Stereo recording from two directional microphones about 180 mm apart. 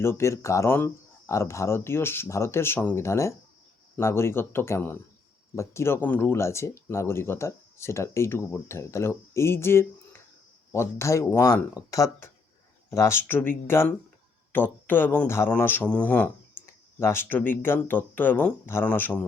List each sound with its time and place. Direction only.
0.0 s speech: 15° left (ahead or behind)